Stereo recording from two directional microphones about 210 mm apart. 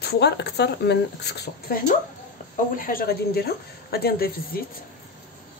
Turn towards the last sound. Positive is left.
turn(degrees=45)  # may be behind; listen again after turning